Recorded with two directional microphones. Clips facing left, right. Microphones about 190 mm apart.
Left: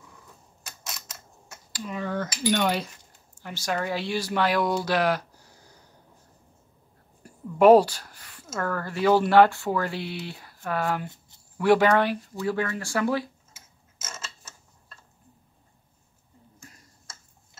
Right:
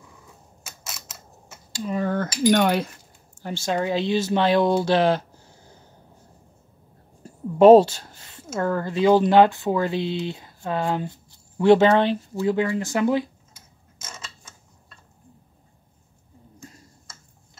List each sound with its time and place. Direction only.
0.7 s mechanisms: 5° right (ahead or behind)
1.9 s cutlery: 45° right (ahead or behind)
2.5 s speech: 55° right (ahead or behind)
3.4 s speech: 25° right (ahead or behind)
7.2 s speech: 25° right (ahead or behind)
13.9 s creak: 5° left (ahead or behind)